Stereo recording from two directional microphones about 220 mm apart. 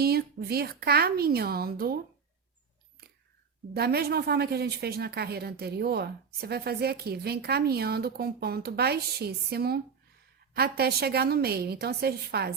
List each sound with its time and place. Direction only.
0.0 s a woman's voice: 45° right (ahead or behind)
3.0 s whispering: 45° right (ahead or behind)
3.8 s a woman's voice: 45° right (ahead or behind)